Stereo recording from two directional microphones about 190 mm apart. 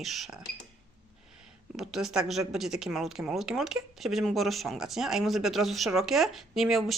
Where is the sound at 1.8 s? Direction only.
Centre (ahead or behind).